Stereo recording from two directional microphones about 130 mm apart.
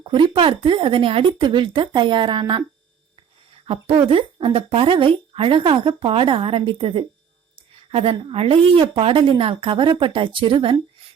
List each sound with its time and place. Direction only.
0.0 s a woman's voice: 40° right (ahead or behind)
4.1 s a woman's voice: 40° right (ahead or behind)